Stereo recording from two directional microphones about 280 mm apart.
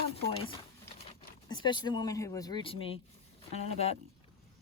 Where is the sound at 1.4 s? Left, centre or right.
Centre.